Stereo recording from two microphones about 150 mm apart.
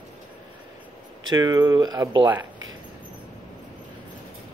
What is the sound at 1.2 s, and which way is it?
Speech, 25° right (ahead or behind).